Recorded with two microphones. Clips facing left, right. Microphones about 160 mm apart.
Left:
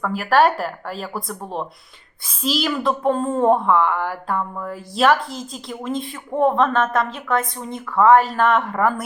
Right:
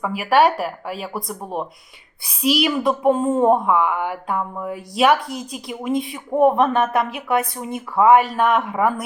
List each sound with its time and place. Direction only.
0.0 s speech: 5° right (ahead or behind)
2.8 s a woman's voice: 15° right (ahead or behind)
3.2 s speech: 5° right (ahead or behind)
6.3 s a woman's voice: 15° right (ahead or behind)
8.1 s speech: centre (ahead or behind)